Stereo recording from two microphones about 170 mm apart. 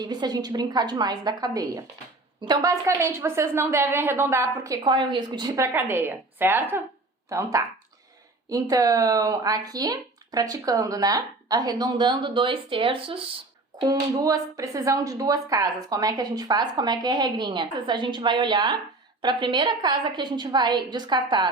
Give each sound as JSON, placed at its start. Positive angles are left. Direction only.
{"t": 0.0, "sound": "a woman's voice", "side_deg": -25}
{"t": 4.8, "sound": "a woman's voice", "side_deg": -25}
{"t": 13.8, "sound": "speech", "side_deg": -20}